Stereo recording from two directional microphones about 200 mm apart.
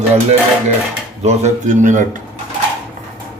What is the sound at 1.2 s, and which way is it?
Speech, 35° right (ahead or behind).